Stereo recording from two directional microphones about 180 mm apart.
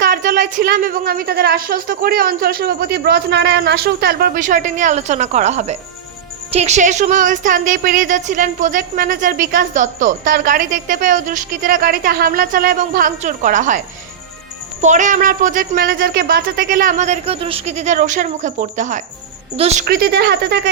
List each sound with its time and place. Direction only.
0.0 s speech: 50° right (ahead or behind)
19.8 s speech: 60° right (ahead or behind)